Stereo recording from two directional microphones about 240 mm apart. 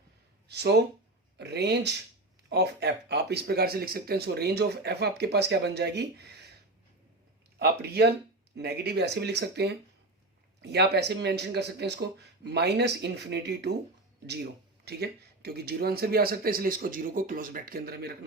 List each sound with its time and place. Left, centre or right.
0.4 s a sound: right
1.4 s speech: right
7.6 s speech: right
14.8 s speech: right